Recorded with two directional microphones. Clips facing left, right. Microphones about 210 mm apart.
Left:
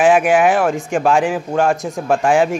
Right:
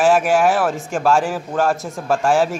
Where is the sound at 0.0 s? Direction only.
Centre (ahead or behind).